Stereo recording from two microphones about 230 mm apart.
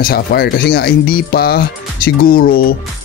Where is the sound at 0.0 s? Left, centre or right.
Left.